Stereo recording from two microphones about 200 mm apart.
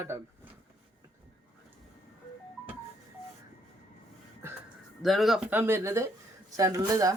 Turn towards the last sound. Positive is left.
turn(degrees=-15)  # may be behind; listen again after turning